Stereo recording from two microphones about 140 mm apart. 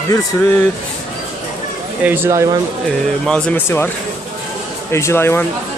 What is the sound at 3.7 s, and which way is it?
Speech, 15° left (ahead or behind).